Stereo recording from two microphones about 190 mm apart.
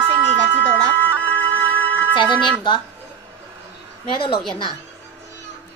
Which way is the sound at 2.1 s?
25° left (ahead or behind).